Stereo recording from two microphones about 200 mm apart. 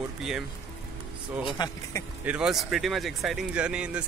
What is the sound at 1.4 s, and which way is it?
Speech, 25° left (ahead or behind).